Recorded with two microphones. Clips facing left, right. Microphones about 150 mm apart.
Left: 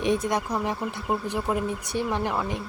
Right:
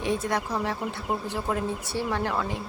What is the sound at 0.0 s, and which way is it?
Speech, 20° left (ahead or behind).